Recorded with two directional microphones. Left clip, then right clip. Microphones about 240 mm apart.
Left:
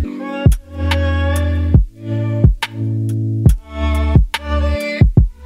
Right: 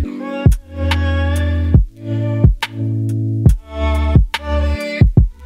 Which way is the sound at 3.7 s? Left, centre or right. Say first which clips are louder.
Right 2 dB; left.